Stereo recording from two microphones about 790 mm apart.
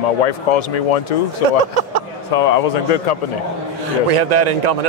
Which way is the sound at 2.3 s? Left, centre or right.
Left.